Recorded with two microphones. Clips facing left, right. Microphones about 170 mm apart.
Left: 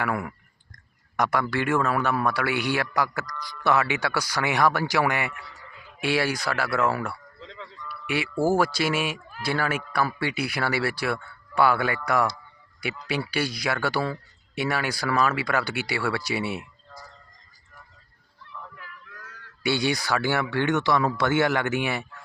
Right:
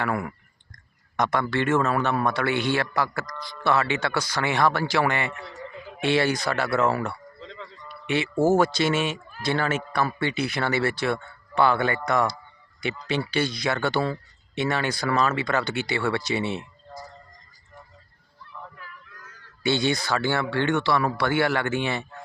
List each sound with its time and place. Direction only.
0.0 s speech: 10° left (ahead or behind)
5.3 s a man's voice: 25° right (ahead or behind)
6.1 s speech: 10° left (ahead or behind)
6.7 s a man's voice: 25° right (ahead or behind)
6.9 s speech: 5° left (ahead or behind)
19.6 s speech: 10° left (ahead or behind)